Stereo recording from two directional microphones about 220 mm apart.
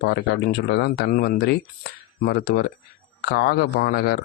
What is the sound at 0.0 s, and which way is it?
Speech, 50° left (ahead or behind).